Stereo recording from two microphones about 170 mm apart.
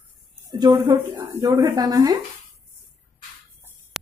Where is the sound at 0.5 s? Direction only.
25° right (ahead or behind).